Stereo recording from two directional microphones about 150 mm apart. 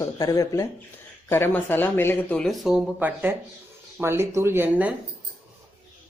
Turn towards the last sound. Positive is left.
turn(degrees=-10)  # may be behind; listen again after turning